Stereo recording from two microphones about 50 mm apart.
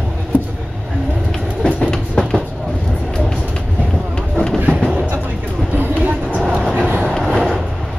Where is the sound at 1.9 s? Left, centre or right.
Centre.